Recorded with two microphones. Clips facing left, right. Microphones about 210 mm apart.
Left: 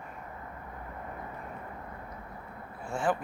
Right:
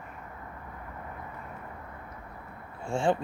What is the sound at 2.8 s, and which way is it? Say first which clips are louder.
Speech: right 3 dB; 25° right (ahead or behind).